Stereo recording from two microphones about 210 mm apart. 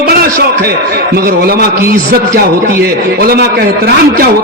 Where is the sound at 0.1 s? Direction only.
50° right (ahead or behind).